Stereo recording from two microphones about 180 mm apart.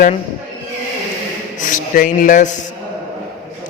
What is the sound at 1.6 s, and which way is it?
Speech, 45° left (ahead or behind).